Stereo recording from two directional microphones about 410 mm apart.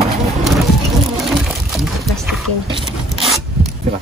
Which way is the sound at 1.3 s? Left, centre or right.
Centre.